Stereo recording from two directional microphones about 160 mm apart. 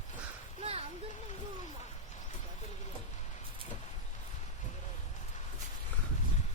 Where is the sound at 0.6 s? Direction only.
40° right (ahead or behind).